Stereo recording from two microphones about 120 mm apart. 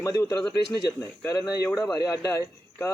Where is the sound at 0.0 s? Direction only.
25° left (ahead or behind).